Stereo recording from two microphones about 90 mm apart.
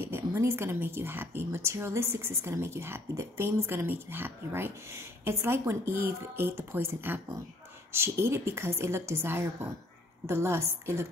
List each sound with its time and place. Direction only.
0.0 s a woman's voice: 30° right (ahead or behind)